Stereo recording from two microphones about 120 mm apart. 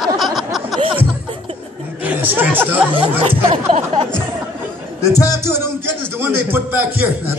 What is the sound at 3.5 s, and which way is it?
Speech, 65° right (ahead or behind).